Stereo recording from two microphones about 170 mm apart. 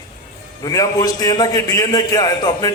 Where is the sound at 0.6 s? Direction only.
20° left (ahead or behind).